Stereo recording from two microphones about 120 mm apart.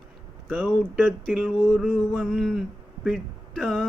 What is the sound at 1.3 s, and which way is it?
Music, 10° right (ahead or behind).